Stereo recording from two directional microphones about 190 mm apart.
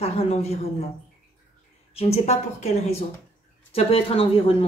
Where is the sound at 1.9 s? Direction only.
35° left (ahead or behind).